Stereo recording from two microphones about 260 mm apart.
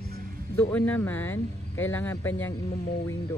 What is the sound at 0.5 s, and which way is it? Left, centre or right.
Speech, centre.